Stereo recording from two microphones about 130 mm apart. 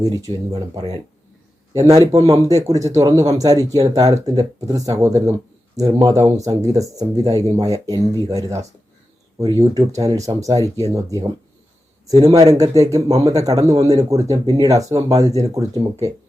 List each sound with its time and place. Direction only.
0.0 s speech: 30° right (ahead or behind)